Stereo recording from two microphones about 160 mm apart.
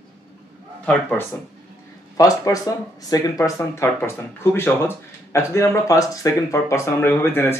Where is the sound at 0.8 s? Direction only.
10° left (ahead or behind).